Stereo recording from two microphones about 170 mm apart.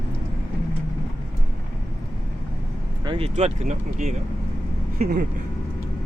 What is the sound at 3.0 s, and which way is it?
Vehicle, 25° right (ahead or behind).